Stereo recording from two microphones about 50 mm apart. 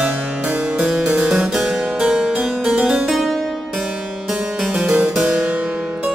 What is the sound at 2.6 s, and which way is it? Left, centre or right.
Music, centre.